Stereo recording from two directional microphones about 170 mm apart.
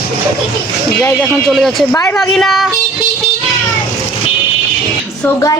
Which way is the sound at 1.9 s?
20° left (ahead or behind).